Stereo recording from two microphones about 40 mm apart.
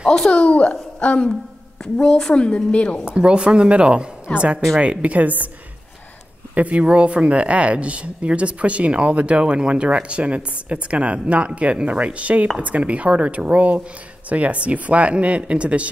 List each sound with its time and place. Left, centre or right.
0.5 s a woman's voice: left
2.0 s a woman's voice: left
3.1 s speech: right
6.5 s speech: right